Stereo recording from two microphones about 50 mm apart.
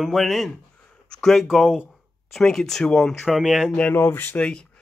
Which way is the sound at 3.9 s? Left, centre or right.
Left.